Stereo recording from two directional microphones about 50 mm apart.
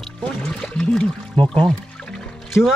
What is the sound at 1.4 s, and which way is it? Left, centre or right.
Speech, left.